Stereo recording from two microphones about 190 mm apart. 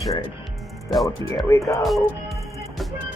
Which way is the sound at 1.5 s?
15° left (ahead or behind).